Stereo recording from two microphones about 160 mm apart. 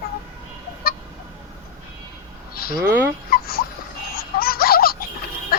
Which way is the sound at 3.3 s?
70° left (ahead or behind).